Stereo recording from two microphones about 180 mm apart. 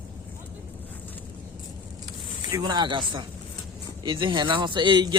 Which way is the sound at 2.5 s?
20° right (ahead or behind).